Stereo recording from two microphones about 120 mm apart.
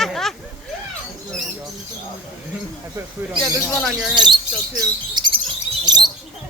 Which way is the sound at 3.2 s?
15° right (ahead or behind).